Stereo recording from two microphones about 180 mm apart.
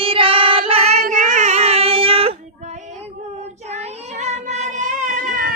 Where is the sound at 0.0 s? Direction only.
30° right (ahead or behind).